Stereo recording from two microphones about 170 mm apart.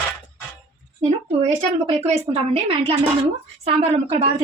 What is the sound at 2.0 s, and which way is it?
A woman's voice, 35° right (ahead or behind).